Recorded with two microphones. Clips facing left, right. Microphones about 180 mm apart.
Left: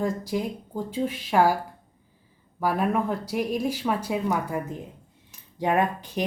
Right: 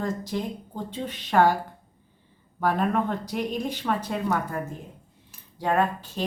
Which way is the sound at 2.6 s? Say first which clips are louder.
Even; 5° left (ahead or behind).